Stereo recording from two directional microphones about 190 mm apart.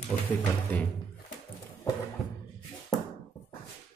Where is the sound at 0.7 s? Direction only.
10° left (ahead or behind).